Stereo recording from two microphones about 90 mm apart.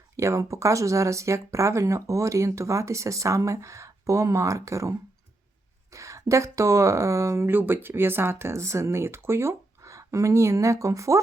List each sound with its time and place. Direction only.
0.2 s speech: 35° right (ahead or behind)